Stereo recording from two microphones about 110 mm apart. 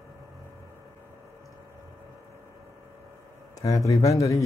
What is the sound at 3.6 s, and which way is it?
Speech, 30° left (ahead or behind).